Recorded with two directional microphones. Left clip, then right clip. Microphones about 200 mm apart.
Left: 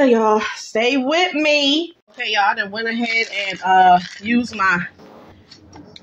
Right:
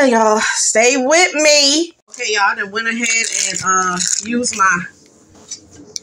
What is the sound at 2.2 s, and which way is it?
Speech, 20° left (ahead or behind).